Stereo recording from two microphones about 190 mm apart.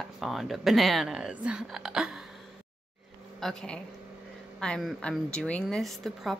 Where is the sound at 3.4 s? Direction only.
Centre (ahead or behind).